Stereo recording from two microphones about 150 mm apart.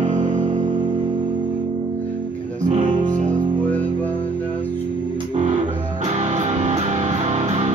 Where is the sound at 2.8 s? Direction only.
30° right (ahead or behind).